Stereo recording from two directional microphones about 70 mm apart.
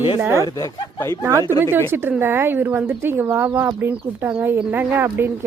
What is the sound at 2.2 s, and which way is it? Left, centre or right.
Speech, right.